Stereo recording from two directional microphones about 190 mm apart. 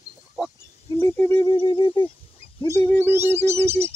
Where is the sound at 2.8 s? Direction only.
10° left (ahead or behind).